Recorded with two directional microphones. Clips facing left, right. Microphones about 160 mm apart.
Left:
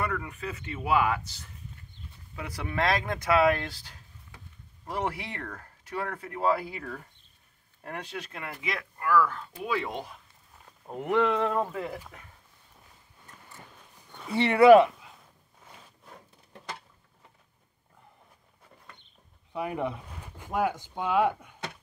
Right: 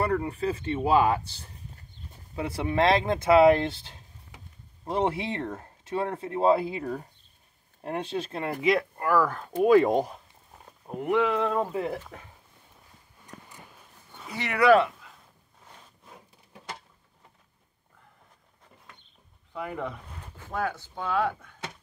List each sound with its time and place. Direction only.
0.0 s speech: 35° right (ahead or behind)
2.4 s speech: 25° right (ahead or behind)
10.9 s speech: 5° right (ahead or behind)
11.7 s speech: 20° right (ahead or behind)
13.5 s clip-clop: 15° right (ahead or behind)
14.3 s speech: 25° left (ahead or behind)
19.5 s speech: 15° left (ahead or behind)